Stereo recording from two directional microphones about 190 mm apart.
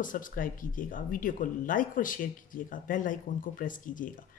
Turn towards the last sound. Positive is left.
turn(degrees=45)  # may be behind; listen again after turning